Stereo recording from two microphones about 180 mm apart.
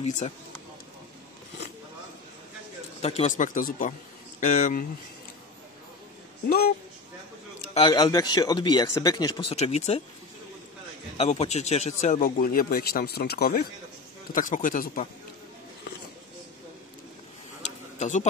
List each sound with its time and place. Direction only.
0.0 s speech: 40° left (ahead or behind)
3.0 s speech: 35° left (ahead or behind)
7.7 s a man's voice: 35° left (ahead or behind)
8.0 s speech: 20° left (ahead or behind)
11.1 s speech: 35° left (ahead or behind); by 13.7 s 60° left (ahead or behind)
14.3 s speech: 45° left (ahead or behind)
17.6 s a sound: 40° left (ahead or behind)